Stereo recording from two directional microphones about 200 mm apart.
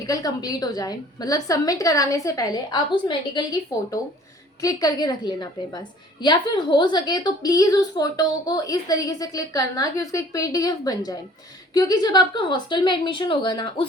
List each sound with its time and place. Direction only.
0.1 s a woman's voice: 20° left (ahead or behind)
4.6 s a woman's voice: 20° left (ahead or behind)